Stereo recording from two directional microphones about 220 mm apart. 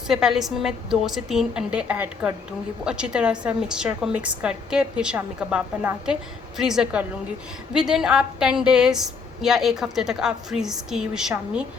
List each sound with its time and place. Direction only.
0.1 s a woman's voice: centre (ahead or behind)